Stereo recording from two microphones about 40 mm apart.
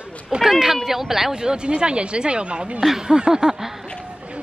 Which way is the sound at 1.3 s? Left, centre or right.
Centre.